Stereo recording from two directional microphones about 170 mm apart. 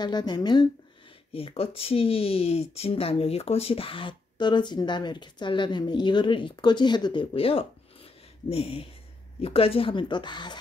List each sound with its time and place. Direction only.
0.0 s speech: 25° left (ahead or behind)